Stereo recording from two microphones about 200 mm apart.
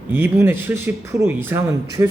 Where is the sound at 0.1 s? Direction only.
10° right (ahead or behind).